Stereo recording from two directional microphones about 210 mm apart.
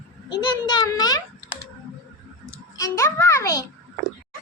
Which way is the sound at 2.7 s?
15° left (ahead or behind).